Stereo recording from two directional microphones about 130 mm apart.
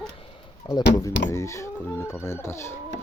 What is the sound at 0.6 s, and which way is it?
Speech, 30° left (ahead or behind).